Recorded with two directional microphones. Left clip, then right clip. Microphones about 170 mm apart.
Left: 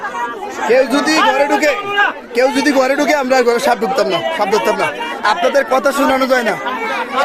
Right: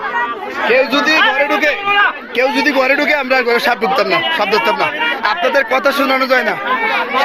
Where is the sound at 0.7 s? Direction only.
45° left (ahead or behind); by 6.6 s 20° left (ahead or behind).